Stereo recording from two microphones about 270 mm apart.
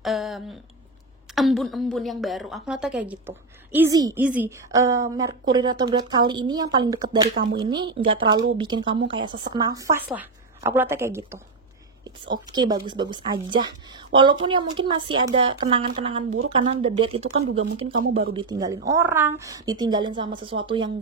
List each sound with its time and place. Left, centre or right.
0.0 s a woman's voice: centre
12.5 s a woman's voice: centre